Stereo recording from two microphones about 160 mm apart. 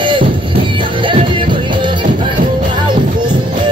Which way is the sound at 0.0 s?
30° right (ahead or behind).